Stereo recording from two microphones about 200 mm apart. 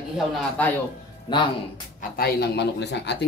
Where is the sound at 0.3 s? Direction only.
10° left (ahead or behind).